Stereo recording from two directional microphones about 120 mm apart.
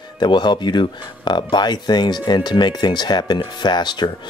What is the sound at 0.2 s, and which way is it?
Speech, 40° left (ahead or behind).